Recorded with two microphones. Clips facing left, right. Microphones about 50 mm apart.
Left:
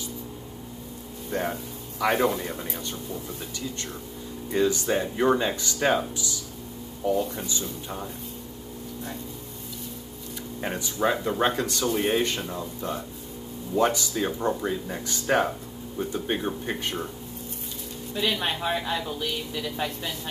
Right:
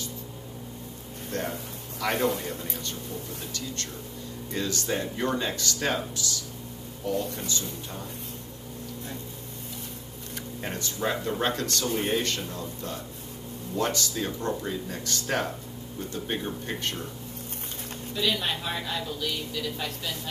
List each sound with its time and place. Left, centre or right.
1.3 s a man's voice: centre
4.5 s speech: centre
10.6 s speech: centre
18.1 s speech: left